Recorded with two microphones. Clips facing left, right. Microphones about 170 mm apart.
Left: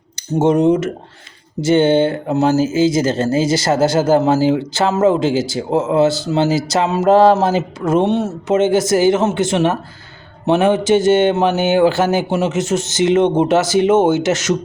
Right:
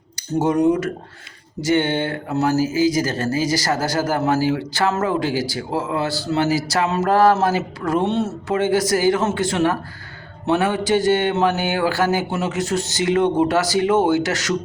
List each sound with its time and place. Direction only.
0.2 s speech: 25° left (ahead or behind)